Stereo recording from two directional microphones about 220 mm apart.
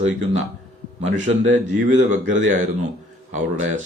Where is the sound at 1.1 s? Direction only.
35° right (ahead or behind).